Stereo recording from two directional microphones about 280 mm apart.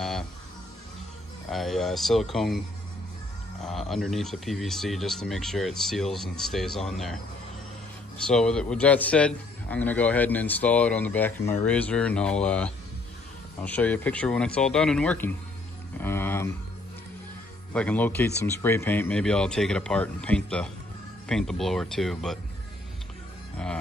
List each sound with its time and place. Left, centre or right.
1.5 s a man's voice: centre
3.9 s a man's voice: centre
8.2 s a man's voice: centre
16.0 s a sound: centre
17.7 s a man's voice: centre